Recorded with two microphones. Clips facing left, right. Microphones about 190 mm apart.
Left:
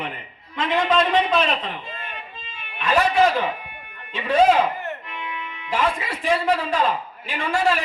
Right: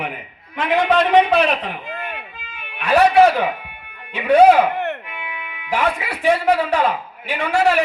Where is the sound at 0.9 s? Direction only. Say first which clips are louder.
Right 6 dB; 65° right (ahead or behind).